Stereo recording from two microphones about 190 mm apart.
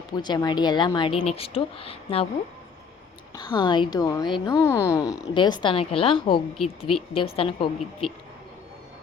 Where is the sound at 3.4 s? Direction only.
25° left (ahead or behind).